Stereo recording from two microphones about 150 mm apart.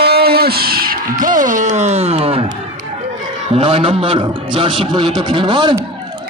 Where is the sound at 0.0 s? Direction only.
90° right; by 2.4 s 40° right (ahead or behind).